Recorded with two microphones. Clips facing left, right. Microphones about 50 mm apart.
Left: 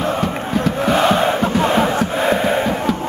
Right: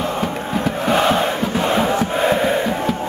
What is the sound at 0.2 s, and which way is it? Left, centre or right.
Crowd, centre.